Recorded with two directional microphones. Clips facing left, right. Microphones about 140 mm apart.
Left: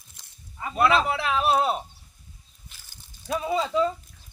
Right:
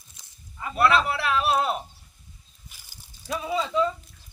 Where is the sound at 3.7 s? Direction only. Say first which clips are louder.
Even; centre (ahead or behind).